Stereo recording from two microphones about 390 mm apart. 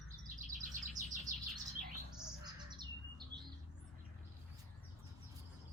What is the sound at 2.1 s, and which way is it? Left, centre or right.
Bird, centre.